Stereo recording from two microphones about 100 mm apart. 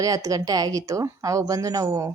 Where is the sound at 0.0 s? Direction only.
35° right (ahead or behind).